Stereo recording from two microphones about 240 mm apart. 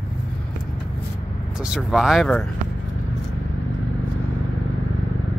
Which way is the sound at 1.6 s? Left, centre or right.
Centre.